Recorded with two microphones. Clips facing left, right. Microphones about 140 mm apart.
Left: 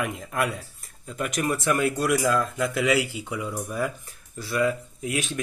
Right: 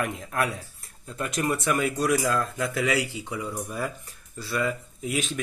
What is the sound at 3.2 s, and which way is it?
Speech, 25° left (ahead or behind).